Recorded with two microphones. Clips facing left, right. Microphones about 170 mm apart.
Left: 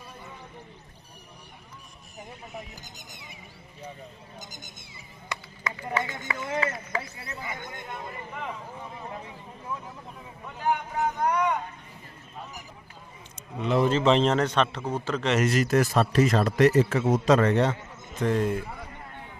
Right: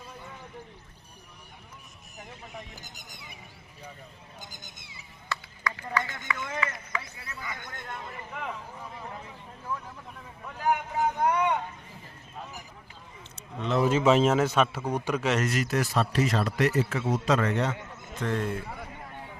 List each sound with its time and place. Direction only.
5.3 s run: 20° left (ahead or behind)
5.9 s speech: 30° left (ahead or behind); by 8.1 s 10° left (ahead or behind)
10.4 s a man's voice: centre (ahead or behind)
13.6 s speech: 5° left (ahead or behind)
13.8 s a man's voice: 5° right (ahead or behind)
15.4 s speech: 40° left (ahead or behind)
18.2 s a man's voice: 15° left (ahead or behind)